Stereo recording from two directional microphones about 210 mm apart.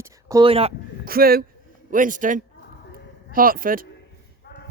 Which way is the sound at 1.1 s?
45° right (ahead or behind).